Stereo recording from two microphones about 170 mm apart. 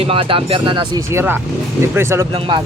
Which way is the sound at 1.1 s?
10° right (ahead or behind).